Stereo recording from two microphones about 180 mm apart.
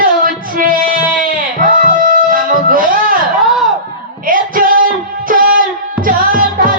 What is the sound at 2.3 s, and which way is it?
Music, 50° right (ahead or behind).